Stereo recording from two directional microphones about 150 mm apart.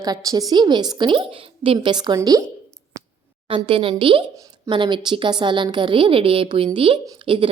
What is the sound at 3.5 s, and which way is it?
A woman's voice, 35° right (ahead or behind).